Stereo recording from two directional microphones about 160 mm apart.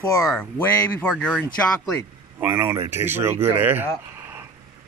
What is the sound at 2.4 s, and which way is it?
Speech, 15° right (ahead or behind).